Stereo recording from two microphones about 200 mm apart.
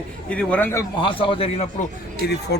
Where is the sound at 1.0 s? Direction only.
25° left (ahead or behind).